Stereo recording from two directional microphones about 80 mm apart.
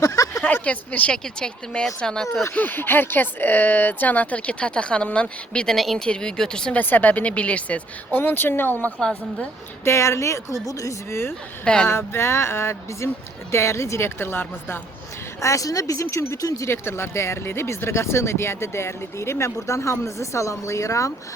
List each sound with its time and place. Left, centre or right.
0.0 s a sound: left
0.4 s speech: centre
2.6 s speech: left
5.7 s speech: centre
6.7 s speech: left
9.0 s speech: centre
9.8 s speech: left
11.6 s speech: centre
11.9 s speech: left
15.4 s speech: left
16.6 s speech: left